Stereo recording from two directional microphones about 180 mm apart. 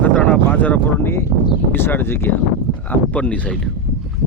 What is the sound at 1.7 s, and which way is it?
Speech, 10° left (ahead or behind).